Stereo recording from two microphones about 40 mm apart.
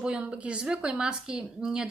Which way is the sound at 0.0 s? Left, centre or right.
Right.